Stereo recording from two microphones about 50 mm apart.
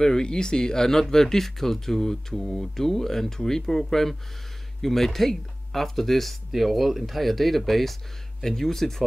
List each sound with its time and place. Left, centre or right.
0.0 s speech: centre